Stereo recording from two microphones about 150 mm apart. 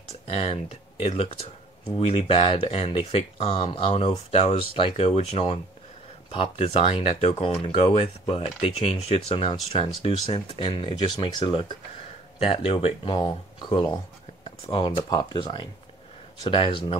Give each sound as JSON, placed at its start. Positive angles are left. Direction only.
{"t": 0.1, "sound": "computer keyboard", "side_deg": 45}
{"t": 1.0, "sound": "speech", "side_deg": 40}